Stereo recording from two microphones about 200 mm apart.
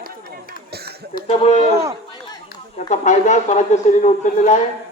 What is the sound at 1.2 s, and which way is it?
Speech, 30° left (ahead or behind).